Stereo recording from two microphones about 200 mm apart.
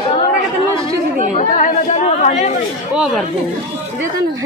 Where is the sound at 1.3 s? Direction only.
35° left (ahead or behind).